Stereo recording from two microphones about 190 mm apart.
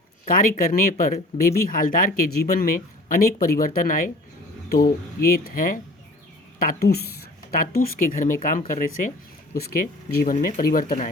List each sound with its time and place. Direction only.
0.3 s a woman's voice: 45° left (ahead or behind)
9.6 s speech: 55° left (ahead or behind)